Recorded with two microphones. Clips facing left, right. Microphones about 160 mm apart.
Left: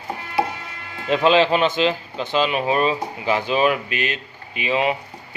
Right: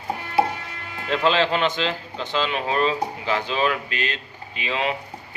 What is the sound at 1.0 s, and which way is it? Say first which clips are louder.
Speech: left 4 dB; 15° left (ahead or behind).